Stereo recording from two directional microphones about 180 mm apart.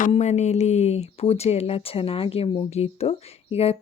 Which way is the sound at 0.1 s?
40° left (ahead or behind).